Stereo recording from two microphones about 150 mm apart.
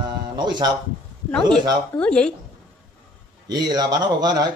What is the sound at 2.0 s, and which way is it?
Speech, 5° left (ahead or behind).